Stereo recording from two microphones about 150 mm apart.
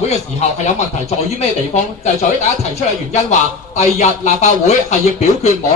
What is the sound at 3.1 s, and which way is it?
Speech, 50° left (ahead or behind).